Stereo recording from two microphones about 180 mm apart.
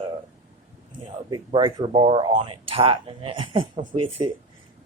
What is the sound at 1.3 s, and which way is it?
Speech, 25° right (ahead or behind).